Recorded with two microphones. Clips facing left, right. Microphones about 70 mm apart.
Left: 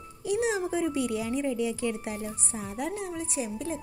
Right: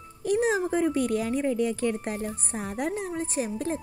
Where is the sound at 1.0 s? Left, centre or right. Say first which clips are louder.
Right 3 dB; centre.